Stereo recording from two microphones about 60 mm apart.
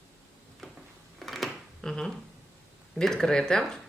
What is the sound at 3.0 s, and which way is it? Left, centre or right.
Speech, centre.